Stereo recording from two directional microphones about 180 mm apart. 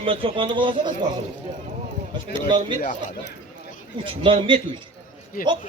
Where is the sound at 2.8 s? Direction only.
55° left (ahead or behind).